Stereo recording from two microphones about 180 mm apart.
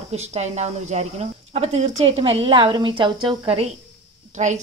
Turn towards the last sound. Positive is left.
turn(degrees=-40)  # may be behind; listen again after turning